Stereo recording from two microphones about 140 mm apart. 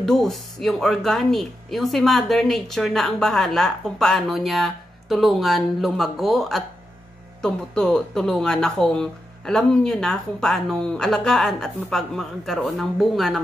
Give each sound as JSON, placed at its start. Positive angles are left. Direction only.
{"t": 0.0, "sound": "speech", "side_deg": 0}